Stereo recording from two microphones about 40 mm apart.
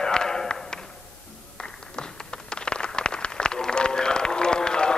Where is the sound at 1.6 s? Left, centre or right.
Left.